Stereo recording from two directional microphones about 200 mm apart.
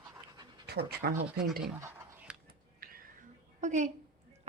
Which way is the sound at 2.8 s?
45° right (ahead or behind).